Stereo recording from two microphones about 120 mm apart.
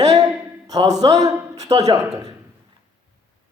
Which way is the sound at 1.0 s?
40° right (ahead or behind).